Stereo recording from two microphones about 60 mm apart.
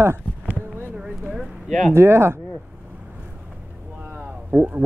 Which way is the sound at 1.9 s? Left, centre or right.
Right.